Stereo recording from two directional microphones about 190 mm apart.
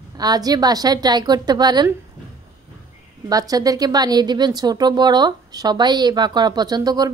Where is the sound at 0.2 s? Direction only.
20° right (ahead or behind).